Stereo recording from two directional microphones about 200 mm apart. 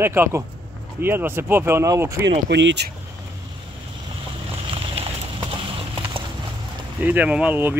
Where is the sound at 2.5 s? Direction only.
60° right (ahead or behind).